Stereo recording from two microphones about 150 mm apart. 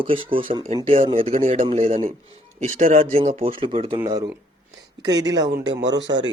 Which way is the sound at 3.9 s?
25° right (ahead or behind).